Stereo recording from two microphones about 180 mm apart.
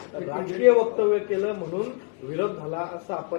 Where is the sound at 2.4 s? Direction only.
25° left (ahead or behind).